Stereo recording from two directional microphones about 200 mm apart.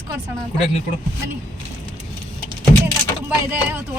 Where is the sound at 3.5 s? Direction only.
10° right (ahead or behind).